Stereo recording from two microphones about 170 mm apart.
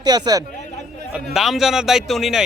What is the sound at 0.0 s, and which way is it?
Speech, 25° right (ahead or behind).